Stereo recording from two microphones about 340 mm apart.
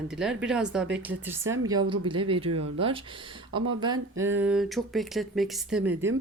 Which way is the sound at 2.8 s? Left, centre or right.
Centre.